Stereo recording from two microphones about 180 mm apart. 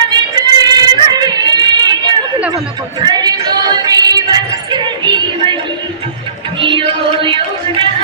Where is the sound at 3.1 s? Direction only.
25° right (ahead or behind).